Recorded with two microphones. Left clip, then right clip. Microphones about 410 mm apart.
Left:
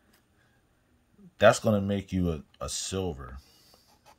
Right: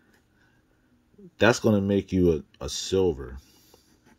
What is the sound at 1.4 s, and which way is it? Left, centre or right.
Speech, centre.